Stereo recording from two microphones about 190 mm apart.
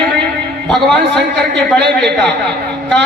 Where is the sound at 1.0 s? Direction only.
60° right (ahead or behind).